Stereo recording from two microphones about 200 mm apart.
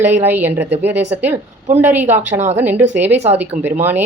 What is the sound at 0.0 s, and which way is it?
A woman's voice, 10° right (ahead or behind).